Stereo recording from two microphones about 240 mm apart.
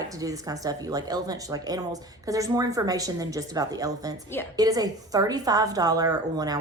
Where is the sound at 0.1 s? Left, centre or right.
Centre.